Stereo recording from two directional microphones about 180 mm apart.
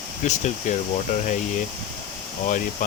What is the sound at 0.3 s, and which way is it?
Speech, 40° left (ahead or behind).